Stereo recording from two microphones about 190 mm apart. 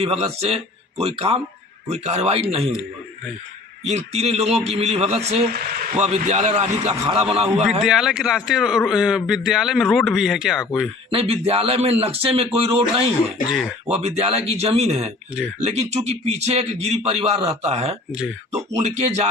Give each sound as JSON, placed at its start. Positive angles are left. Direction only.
{"t": 0.0, "sound": "speech", "side_deg": -30}
{"t": 3.9, "sound": "speech", "side_deg": -35}
{"t": 7.4, "sound": "speech", "side_deg": -5}
{"t": 11.1, "sound": "speech", "side_deg": -30}
{"t": 13.5, "sound": "speech", "side_deg": -5}
{"t": 13.9, "sound": "speech", "side_deg": -35}